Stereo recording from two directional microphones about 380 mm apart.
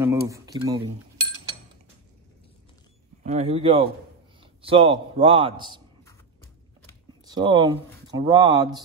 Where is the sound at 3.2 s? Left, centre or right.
Centre.